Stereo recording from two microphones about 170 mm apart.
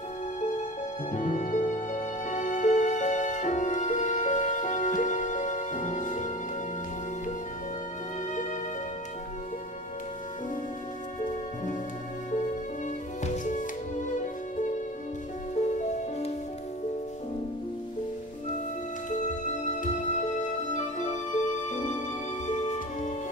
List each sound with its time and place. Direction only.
1.1 s music: 45° left (ahead or behind)
13.2 s music: 45° left (ahead or behind)
15.5 s music: 45° left (ahead or behind)
19.0 s music: 45° left (ahead or behind)